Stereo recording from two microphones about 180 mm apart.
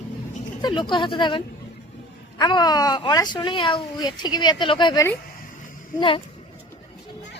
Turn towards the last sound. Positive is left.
turn(degrees=25)  # may be behind; listen again after turning